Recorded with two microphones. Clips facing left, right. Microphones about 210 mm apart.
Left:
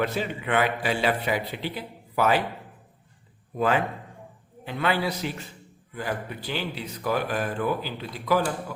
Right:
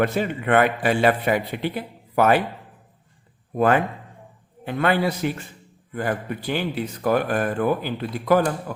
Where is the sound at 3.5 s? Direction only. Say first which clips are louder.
Right 5 dB; 55° right (ahead or behind).